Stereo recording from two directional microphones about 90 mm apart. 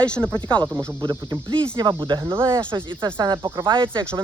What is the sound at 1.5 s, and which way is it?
Speech, 60° right (ahead or behind).